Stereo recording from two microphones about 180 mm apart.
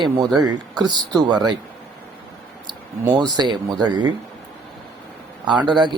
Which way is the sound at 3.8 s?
25° right (ahead or behind).